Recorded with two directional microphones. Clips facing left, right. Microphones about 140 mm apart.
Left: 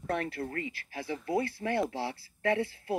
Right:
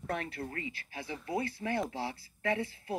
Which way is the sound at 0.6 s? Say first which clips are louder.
Left 4 dB; 20° right (ahead or behind).